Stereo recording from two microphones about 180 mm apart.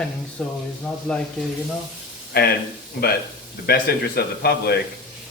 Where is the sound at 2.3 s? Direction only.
60° left (ahead or behind).